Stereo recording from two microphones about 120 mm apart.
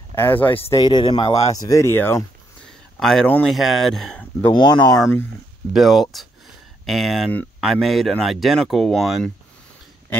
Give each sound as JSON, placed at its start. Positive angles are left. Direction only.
{"t": 0.1, "sound": "speech", "side_deg": 20}
{"t": 0.7, "sound": "speech", "side_deg": 40}
{"t": 3.0, "sound": "speech", "side_deg": 5}
{"t": 4.5, "sound": "speech", "side_deg": 40}
{"t": 5.7, "sound": "speech", "side_deg": 0}